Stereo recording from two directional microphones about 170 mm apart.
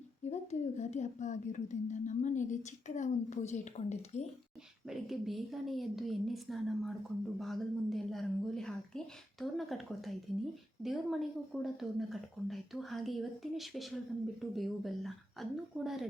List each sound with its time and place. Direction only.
0.3 s a woman's voice: 40° left (ahead or behind)
4.9 s a woman's voice: centre (ahead or behind)